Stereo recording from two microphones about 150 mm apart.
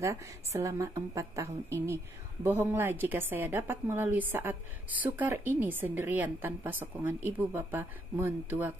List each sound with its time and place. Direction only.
0.0 s a woman's voice: 20° right (ahead or behind)